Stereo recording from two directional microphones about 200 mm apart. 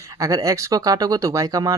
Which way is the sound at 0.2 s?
15° right (ahead or behind).